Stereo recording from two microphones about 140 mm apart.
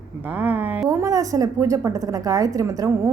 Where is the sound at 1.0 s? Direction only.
25° right (ahead or behind).